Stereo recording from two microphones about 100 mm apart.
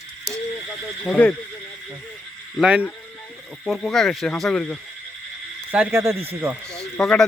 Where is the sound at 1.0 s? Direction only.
10° left (ahead or behind).